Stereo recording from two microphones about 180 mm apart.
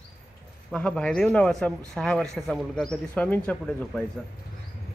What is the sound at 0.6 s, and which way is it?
Speech, 5° left (ahead or behind).